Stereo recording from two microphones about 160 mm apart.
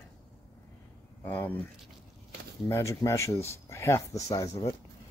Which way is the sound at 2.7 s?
20° left (ahead or behind).